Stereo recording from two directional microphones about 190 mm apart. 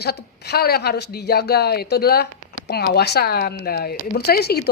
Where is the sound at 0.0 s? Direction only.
55° left (ahead or behind).